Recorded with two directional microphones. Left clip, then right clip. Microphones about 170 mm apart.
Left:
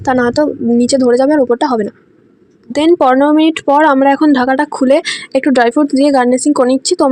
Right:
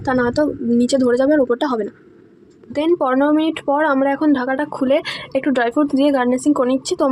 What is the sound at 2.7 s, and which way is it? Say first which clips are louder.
Speech: left 7 dB; 40° left (ahead or behind).